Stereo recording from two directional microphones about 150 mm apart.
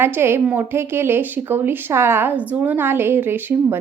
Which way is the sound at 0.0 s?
15° right (ahead or behind).